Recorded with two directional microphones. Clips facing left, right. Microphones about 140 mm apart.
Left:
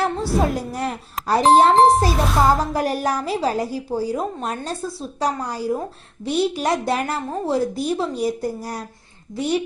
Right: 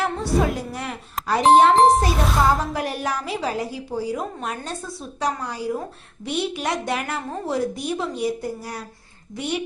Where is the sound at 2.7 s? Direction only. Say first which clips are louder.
Left 4 dB; 40° left (ahead or behind).